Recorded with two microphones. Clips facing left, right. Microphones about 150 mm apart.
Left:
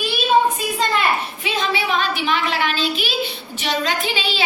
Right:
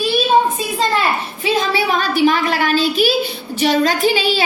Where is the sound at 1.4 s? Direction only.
40° right (ahead or behind).